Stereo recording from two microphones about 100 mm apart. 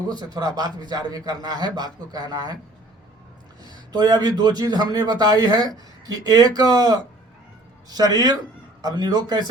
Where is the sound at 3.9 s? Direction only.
45° right (ahead or behind).